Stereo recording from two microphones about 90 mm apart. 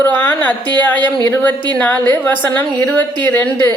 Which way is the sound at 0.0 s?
20° left (ahead or behind).